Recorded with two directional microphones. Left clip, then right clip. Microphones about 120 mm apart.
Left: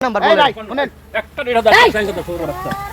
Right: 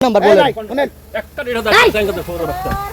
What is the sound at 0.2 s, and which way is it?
Speech, 60° right (ahead or behind).